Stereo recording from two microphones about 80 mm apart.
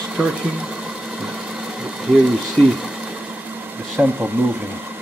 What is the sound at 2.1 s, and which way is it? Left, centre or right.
Speech, centre.